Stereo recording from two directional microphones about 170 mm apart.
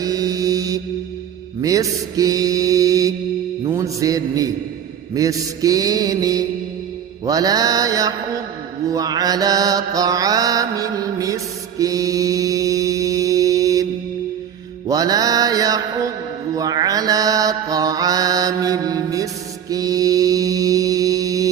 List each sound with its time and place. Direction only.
0.0 s mantra: 20° right (ahead or behind)
14.8 s mantra: 20° right (ahead or behind)